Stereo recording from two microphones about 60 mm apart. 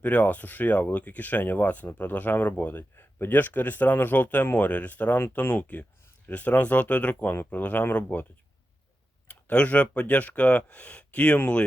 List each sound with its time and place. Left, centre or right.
0.0 s speech: left
9.3 s speech: left